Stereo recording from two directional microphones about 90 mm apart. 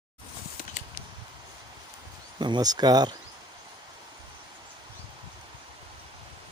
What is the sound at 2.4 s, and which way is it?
Speech, 50° right (ahead or behind).